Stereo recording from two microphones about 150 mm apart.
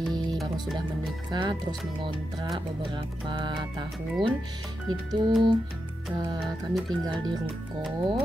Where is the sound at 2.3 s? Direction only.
25° right (ahead or behind).